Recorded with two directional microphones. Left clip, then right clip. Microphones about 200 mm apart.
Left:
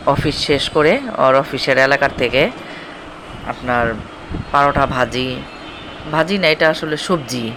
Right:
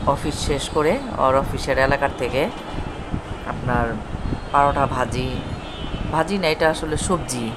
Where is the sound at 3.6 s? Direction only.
15° left (ahead or behind).